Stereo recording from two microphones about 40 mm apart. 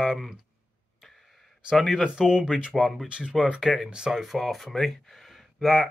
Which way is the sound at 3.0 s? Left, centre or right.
Right.